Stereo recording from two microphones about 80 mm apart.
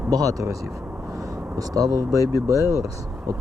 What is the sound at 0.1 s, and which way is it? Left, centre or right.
Speech, right.